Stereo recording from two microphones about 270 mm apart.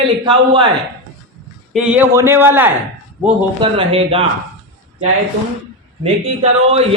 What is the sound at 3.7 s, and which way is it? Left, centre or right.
Speech, right.